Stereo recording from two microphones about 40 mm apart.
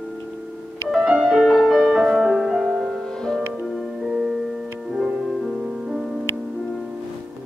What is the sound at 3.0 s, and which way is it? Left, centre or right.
Music, centre.